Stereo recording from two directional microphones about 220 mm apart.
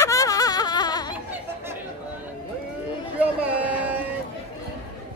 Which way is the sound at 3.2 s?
5° right (ahead or behind).